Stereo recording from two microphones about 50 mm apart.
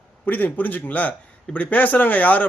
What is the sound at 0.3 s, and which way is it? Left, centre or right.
A man's voice, left.